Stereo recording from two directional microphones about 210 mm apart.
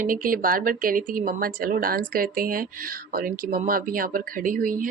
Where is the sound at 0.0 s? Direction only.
40° right (ahead or behind).